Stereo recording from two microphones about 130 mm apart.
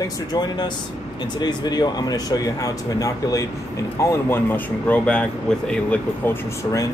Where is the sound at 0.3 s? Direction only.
35° left (ahead or behind); by 6.3 s 10° left (ahead or behind).